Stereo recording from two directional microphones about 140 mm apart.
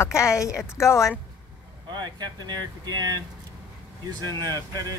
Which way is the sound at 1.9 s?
30° right (ahead or behind).